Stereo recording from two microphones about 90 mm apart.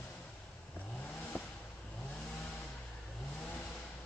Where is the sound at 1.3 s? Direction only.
20° left (ahead or behind).